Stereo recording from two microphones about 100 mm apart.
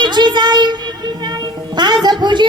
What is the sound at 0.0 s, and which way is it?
Music, 45° right (ahead or behind).